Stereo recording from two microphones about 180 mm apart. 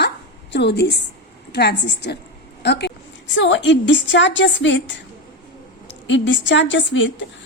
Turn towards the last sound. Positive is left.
turn(degrees=90)